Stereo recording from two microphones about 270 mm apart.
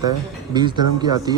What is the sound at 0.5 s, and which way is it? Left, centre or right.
Speech, centre.